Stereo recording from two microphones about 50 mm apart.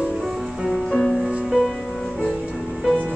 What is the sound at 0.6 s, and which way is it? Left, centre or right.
Music, centre.